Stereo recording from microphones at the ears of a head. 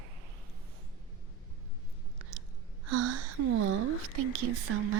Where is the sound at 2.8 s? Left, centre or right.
Right.